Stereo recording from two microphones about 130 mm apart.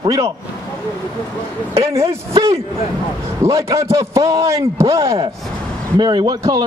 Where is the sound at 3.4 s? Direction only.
25° right (ahead or behind).